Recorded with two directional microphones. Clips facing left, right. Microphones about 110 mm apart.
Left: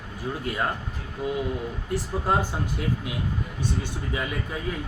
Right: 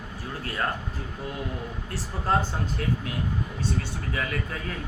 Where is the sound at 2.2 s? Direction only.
15° left (ahead or behind).